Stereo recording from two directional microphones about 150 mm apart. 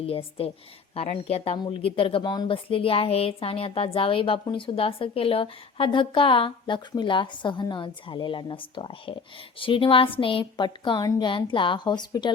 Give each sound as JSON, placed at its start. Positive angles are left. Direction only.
{"t": 0.0, "sound": "speech", "side_deg": 40}